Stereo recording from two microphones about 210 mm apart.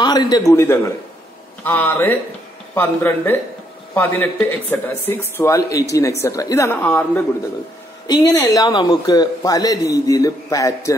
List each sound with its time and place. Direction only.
0.0 s a man's voice: 20° left (ahead or behind)